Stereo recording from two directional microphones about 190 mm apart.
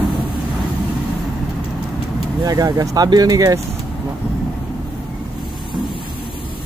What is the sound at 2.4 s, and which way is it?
Speech, 20° right (ahead or behind).